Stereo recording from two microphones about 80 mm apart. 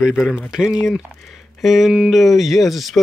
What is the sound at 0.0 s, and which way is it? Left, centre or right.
Speech, centre.